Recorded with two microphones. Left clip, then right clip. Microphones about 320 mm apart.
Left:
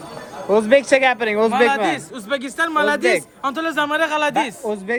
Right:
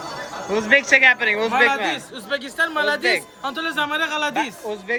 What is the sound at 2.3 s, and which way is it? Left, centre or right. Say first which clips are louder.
Speech: left 2 dB; left.